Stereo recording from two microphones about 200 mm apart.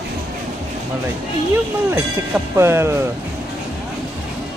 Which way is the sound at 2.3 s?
10° right (ahead or behind).